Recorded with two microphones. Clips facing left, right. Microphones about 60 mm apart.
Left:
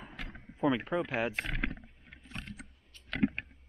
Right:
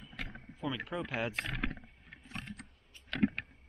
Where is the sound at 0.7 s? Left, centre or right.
Centre.